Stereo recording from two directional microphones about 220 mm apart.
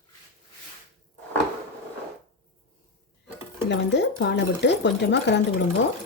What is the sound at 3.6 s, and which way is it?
Speech, 50° left (ahead or behind).